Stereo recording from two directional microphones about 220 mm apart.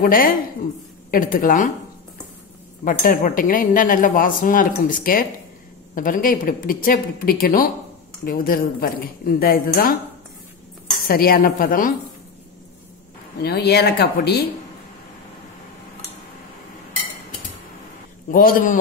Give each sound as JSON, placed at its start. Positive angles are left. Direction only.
{"t": 0.0, "sound": "speech", "side_deg": 40}
{"t": 2.8, "sound": "speech", "side_deg": 35}
{"t": 11.1, "sound": "speech", "side_deg": 40}
{"t": 13.4, "sound": "speech", "side_deg": 45}
{"t": 18.3, "sound": "speech", "side_deg": 40}